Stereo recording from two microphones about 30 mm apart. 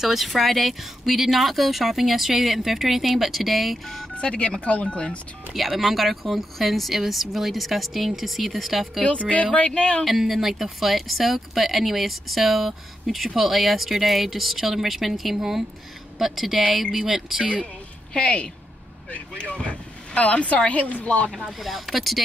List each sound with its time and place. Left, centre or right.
0.0 s speech: centre
3.8 s speech: centre
4.1 s speech: left
5.5 s speech: centre
9.3 s a woman's voice: left
10.0 s speech: centre
18.1 s a woman's voice: left
20.7 s a woman's voice: left
21.5 s speech: centre